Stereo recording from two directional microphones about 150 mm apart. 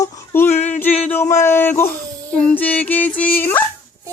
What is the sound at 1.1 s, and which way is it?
Speech, 15° left (ahead or behind).